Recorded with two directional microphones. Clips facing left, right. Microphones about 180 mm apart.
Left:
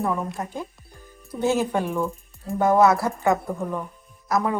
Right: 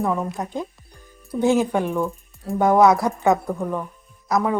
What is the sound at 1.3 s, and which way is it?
Speech, 15° right (ahead or behind).